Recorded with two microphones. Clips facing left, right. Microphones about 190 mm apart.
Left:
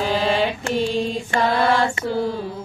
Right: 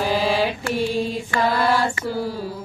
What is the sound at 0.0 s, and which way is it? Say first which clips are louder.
Mantra: even; 5° right (ahead or behind).